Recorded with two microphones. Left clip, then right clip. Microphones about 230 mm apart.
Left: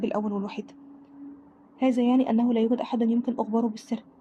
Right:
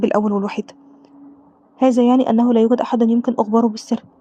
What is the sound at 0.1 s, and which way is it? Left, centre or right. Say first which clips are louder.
Speech: right 11 dB; right.